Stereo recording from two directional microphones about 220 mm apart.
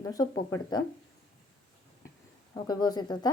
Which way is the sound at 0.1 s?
15° left (ahead or behind).